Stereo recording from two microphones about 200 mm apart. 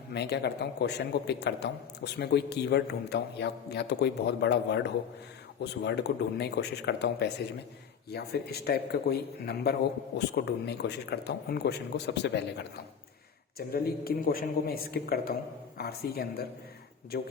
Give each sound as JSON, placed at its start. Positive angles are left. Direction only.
{"t": 0.1, "sound": "a man's voice", "side_deg": 55}
{"t": 13.6, "sound": "a man's voice", "side_deg": 50}